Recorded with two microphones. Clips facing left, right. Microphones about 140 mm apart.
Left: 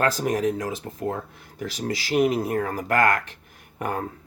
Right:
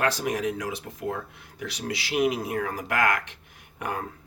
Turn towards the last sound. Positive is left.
turn(degrees=45)  # may be behind; listen again after turning